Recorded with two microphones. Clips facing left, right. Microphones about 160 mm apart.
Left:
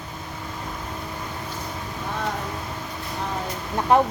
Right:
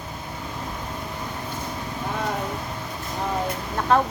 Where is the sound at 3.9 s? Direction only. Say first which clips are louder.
Left 2 dB; 15° left (ahead or behind).